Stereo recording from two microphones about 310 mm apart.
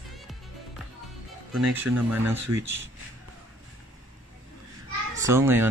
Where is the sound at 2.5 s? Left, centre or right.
Right.